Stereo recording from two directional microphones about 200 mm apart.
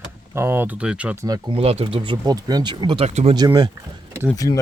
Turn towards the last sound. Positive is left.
turn(degrees=15)  # may be behind; listen again after turning